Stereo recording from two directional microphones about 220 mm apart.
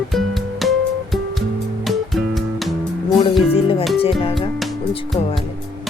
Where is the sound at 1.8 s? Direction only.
Centre (ahead or behind).